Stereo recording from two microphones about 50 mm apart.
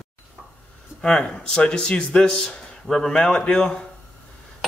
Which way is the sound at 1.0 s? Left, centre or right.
Centre.